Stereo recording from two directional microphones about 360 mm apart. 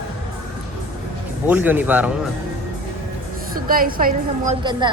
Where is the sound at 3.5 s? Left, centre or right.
Right.